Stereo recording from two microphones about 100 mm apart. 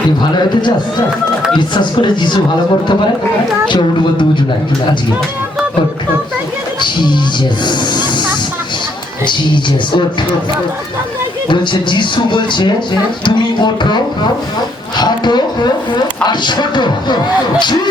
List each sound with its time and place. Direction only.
0.2 s speech: 45° left (ahead or behind)
3.7 s speech: 55° left (ahead or behind)
6.8 s speech: 50° left (ahead or behind)
7.6 s snake: 50° left (ahead or behind)
9.2 s speech: 50° left (ahead or behind)
11.4 s speech: 50° left (ahead or behind)
14.9 s a sound: 45° left (ahead or behind)
16.2 s speech: 50° left (ahead or behind)